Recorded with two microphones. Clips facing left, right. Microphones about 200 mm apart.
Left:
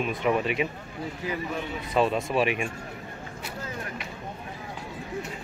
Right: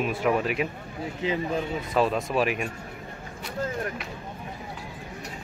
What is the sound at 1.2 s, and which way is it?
Speech, 20° right (ahead or behind).